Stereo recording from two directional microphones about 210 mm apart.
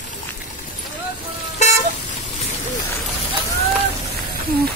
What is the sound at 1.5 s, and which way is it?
Vehicle, 35° left (ahead or behind).